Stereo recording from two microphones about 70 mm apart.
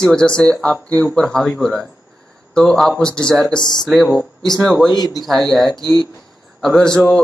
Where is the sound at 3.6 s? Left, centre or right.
Left.